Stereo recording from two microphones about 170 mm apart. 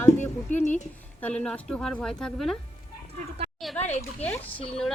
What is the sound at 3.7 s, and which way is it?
Speech, 40° left (ahead or behind).